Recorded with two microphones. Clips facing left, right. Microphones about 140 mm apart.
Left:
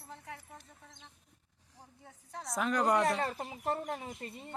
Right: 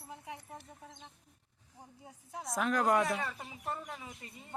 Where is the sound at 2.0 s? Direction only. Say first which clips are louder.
Right 1 dB; 5° right (ahead or behind).